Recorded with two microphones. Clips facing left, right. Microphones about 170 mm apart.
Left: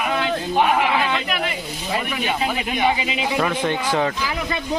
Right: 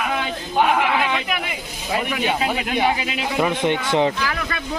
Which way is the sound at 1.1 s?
15° right (ahead or behind).